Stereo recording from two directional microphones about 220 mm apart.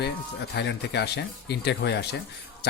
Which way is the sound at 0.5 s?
50° left (ahead or behind).